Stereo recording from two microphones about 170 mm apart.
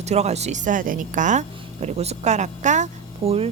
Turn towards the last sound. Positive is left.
turn(degrees=-35)  # may be behind; listen again after turning